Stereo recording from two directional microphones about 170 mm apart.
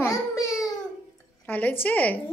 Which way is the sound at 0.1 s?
20° left (ahead or behind).